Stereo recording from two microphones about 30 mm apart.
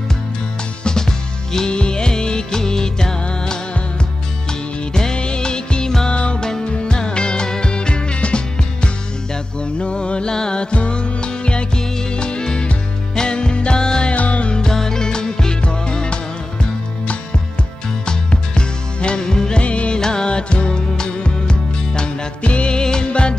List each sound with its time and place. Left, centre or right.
0.8 s music: centre
1.7 s music: left
3.3 s music: left
4.5 s music: left
10.7 s music: left
14.1 s music: left
14.7 s music: centre; by 16.2 s left
18.0 s music: left
19.6 s music: left
20.0 s music: left
20.2 s music: left